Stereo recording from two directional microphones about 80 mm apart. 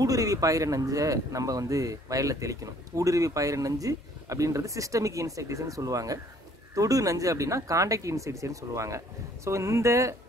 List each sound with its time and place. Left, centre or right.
0.0 s speech: right